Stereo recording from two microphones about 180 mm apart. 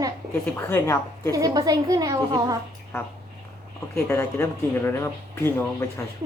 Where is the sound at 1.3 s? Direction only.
20° right (ahead or behind).